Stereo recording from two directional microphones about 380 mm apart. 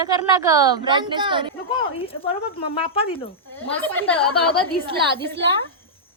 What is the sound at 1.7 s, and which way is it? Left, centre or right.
Speech, left.